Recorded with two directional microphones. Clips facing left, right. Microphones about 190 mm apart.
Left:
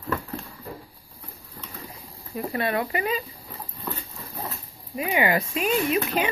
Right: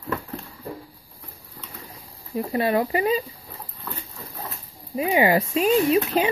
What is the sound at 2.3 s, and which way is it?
Speech, 25° right (ahead or behind).